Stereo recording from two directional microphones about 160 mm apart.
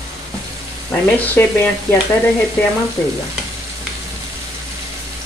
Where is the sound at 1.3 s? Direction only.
10° left (ahead or behind).